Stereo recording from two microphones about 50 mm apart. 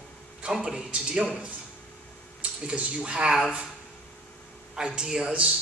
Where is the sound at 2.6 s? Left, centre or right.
Right.